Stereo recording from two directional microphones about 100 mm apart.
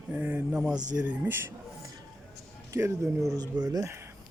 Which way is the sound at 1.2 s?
20° right (ahead or behind).